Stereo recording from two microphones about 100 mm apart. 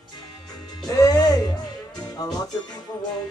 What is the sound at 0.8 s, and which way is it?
Music, 35° left (ahead or behind).